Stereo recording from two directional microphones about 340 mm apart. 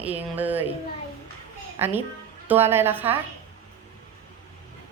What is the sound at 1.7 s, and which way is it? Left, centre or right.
A woman's voice, centre.